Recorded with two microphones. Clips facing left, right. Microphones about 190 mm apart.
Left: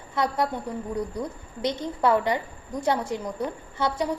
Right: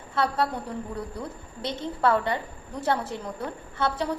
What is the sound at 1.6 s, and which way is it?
A woman's voice, 15° left (ahead or behind).